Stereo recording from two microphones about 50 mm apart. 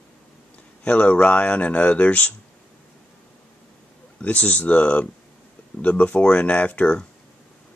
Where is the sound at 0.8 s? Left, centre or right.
Left.